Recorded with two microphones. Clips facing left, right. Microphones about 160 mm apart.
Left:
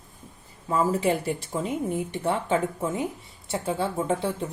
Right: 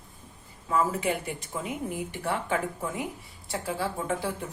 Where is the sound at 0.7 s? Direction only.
35° left (ahead or behind).